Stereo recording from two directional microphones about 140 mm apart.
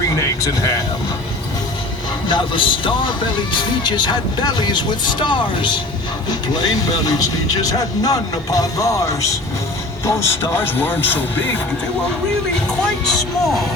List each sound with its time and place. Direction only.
0.2 s speech: 25° left (ahead or behind)
2.2 s speech: 35° left (ahead or behind); by 11.3 s 15° left (ahead or behind)
13.1 s speech: centre (ahead or behind)